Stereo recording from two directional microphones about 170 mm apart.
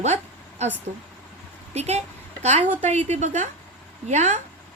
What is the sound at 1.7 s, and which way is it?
A woman's voice, 40° right (ahead or behind).